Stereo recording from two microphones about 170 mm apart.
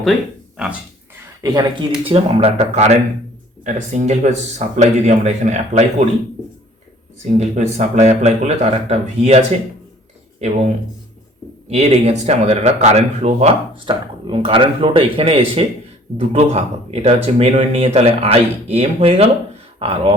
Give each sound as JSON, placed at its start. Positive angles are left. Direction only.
{"t": 0.5, "sound": "speech", "side_deg": -5}
{"t": 1.4, "sound": "speech", "side_deg": -20}
{"t": 7.3, "sound": "speech", "side_deg": -45}
{"t": 11.7, "sound": "speech", "side_deg": -40}